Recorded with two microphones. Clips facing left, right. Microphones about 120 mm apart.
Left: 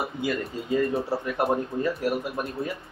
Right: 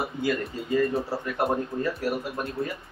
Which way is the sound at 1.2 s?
10° left (ahead or behind).